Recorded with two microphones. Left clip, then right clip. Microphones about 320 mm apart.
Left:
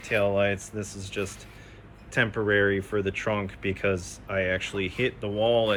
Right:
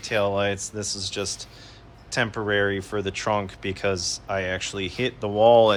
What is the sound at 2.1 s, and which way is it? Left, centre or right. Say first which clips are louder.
Speech: even; centre.